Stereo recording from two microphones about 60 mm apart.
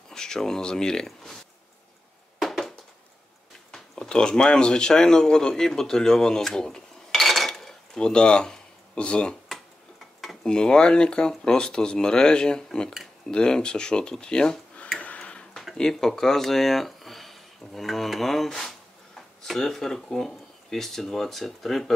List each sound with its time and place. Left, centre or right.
0.1 s speech: centre
2.3 s a sound: centre
3.7 s speech: centre
7.1 s dishes: centre
10.2 s speech: centre
15.0 s tick-tock: left
15.5 s speech: centre